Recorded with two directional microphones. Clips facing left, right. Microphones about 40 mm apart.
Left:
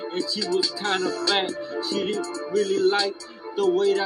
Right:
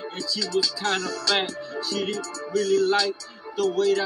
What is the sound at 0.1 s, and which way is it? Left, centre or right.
Music, left.